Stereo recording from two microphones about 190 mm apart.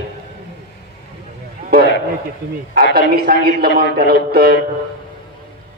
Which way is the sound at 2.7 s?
55° right (ahead or behind).